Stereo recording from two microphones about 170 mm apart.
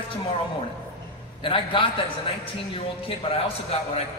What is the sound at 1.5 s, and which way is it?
Speech, 30° left (ahead or behind).